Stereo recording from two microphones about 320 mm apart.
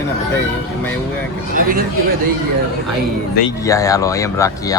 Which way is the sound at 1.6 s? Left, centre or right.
Right.